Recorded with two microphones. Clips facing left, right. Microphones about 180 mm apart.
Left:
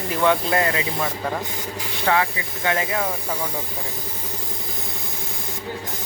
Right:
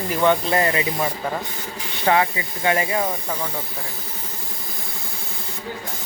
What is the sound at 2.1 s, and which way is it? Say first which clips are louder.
Speech: right 2 dB; 25° right (ahead or behind).